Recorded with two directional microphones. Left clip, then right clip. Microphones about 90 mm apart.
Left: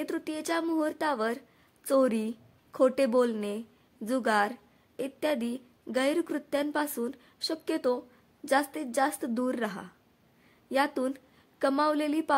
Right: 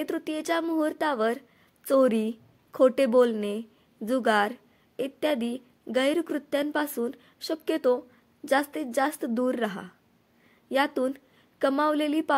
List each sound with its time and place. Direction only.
0.0 s a woman's voice: 20° right (ahead or behind)